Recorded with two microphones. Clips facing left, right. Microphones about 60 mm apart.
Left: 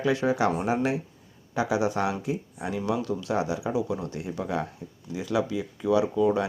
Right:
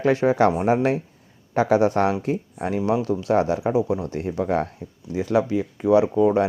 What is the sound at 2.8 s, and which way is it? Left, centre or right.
Speech, right.